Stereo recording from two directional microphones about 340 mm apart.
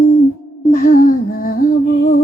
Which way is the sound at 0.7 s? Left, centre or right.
Left.